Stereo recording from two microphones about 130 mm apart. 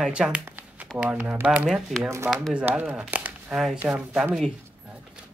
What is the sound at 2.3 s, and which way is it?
Speech, centre (ahead or behind).